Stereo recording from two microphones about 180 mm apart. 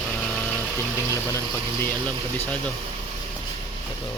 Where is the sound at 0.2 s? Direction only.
5° left (ahead or behind).